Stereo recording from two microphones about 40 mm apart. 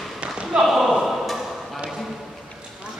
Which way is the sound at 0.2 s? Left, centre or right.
Right.